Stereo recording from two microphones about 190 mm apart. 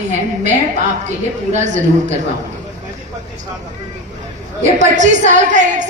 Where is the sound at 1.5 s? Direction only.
40° right (ahead or behind).